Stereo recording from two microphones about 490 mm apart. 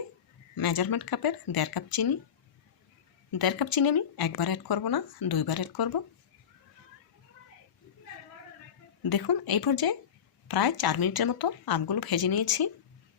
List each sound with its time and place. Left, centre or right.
0.5 s speech: left
3.3 s speech: left
9.0 s speech: left